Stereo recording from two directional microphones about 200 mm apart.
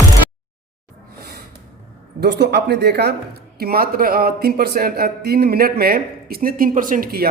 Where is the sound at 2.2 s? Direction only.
55° right (ahead or behind).